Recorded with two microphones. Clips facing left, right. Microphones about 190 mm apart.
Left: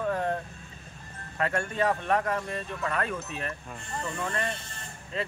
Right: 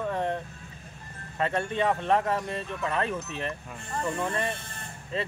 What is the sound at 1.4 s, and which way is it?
Speech, 25° right (ahead or behind).